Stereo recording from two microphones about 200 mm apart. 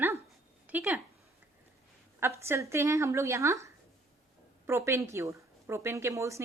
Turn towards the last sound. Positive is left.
turn(degrees=-15)  # may be behind; listen again after turning